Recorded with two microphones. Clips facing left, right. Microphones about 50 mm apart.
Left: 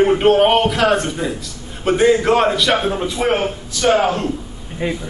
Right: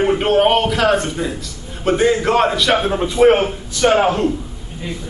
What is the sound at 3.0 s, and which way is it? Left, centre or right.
A man's voice, right.